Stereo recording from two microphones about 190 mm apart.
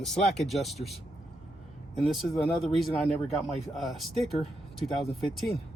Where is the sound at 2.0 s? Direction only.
Centre (ahead or behind).